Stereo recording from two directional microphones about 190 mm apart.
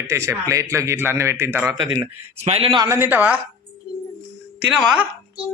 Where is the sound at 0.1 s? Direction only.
15° right (ahead or behind).